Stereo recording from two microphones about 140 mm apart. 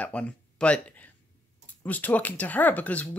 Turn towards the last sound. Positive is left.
turn(degrees=10)  # may be behind; listen again after turning